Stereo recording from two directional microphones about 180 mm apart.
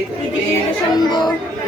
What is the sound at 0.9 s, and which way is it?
Speech, 25° left (ahead or behind).